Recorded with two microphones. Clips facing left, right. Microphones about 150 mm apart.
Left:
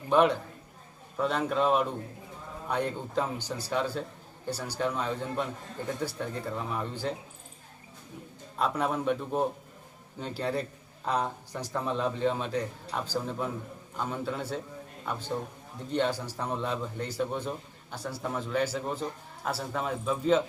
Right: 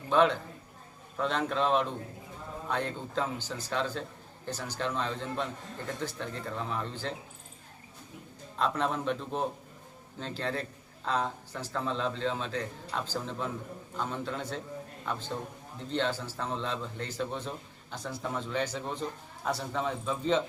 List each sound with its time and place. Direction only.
0.1 s a man's voice: 10° left (ahead or behind)
8.5 s a man's voice: 10° left (ahead or behind)